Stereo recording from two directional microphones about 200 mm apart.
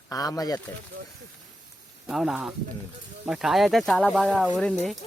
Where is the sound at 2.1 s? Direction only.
Centre (ahead or behind).